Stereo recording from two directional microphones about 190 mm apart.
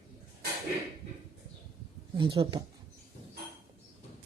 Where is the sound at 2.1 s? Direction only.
25° right (ahead or behind).